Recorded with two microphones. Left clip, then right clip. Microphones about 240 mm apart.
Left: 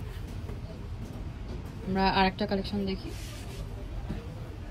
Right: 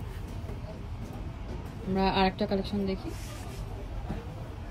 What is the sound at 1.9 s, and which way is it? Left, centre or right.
Speech, centre.